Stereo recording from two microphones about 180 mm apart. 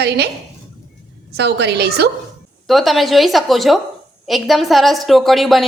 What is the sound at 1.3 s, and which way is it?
Speech, 70° right (ahead or behind).